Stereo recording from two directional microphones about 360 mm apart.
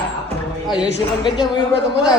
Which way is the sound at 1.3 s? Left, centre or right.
Centre.